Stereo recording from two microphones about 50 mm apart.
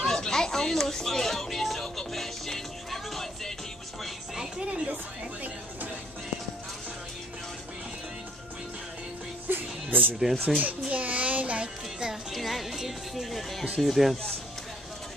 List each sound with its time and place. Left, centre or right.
0.0 s a sound: centre
4.6 s a sound: right
9.5 s music: right
10.3 s a child's voice: centre
10.9 s child singing: right
12.3 s music: centre
13.7 s speech: centre